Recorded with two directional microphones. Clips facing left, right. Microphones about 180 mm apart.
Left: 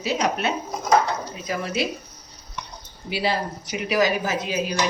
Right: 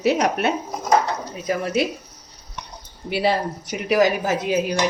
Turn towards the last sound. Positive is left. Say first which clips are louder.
# right 4 dB
turn(degrees=-55)  # may be behind; listen again after turning